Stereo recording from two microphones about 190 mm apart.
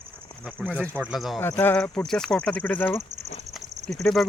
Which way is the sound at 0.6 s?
5° right (ahead or behind).